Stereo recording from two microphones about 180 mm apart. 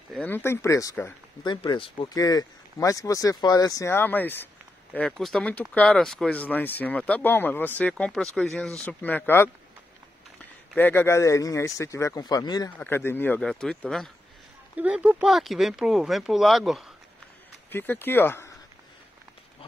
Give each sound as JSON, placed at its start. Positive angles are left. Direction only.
{"t": 0.1, "sound": "speech", "side_deg": 10}
{"t": 10.8, "sound": "speech", "side_deg": 10}
{"t": 14.8, "sound": "speech", "side_deg": -10}
{"t": 17.6, "sound": "speech", "side_deg": 10}